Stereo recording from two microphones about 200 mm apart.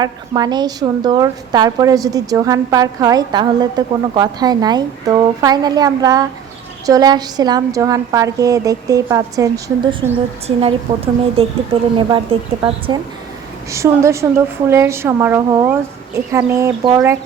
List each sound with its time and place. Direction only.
0.0 s a woman's voice: 20° right (ahead or behind)
13.7 s a woman's voice: 15° right (ahead or behind)